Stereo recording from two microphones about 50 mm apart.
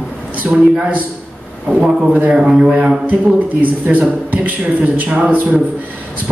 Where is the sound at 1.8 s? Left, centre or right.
Right.